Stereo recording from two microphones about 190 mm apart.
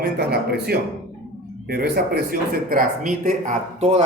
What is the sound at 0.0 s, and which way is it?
Speech, 55° right (ahead or behind).